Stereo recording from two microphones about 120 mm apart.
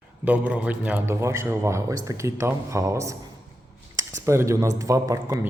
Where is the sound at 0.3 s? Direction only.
10° right (ahead or behind).